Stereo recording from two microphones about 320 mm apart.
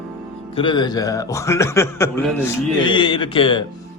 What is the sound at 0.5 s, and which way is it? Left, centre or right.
A man's voice, centre.